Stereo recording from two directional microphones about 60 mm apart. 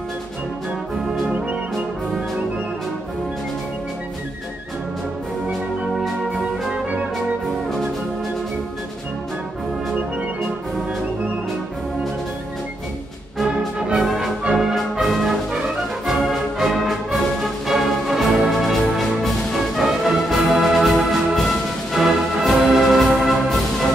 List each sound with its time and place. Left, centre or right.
6.7 s music: centre
13.4 s music: centre
14.0 s brass instrument: centre
16.1 s music: centre